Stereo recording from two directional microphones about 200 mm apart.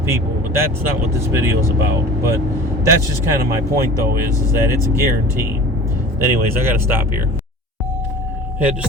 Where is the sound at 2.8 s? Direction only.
15° right (ahead or behind).